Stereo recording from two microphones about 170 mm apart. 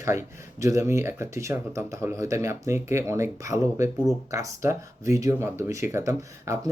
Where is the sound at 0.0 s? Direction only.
15° right (ahead or behind).